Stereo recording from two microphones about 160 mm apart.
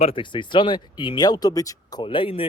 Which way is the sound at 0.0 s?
35° left (ahead or behind).